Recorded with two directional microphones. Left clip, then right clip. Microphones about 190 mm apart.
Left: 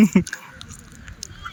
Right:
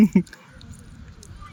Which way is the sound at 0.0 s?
5° right (ahead or behind).